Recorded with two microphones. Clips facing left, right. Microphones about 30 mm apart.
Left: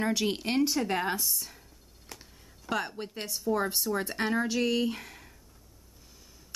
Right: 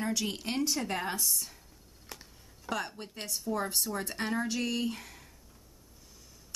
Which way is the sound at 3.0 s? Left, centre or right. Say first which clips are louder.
Left 3 dB; centre.